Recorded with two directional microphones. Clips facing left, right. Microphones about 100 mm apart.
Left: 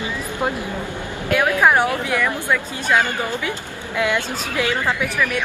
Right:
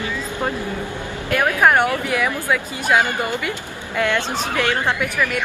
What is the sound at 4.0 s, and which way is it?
Speech, 10° left (ahead or behind).